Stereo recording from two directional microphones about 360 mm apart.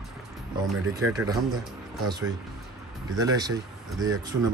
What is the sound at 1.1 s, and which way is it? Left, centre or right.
Speech, centre.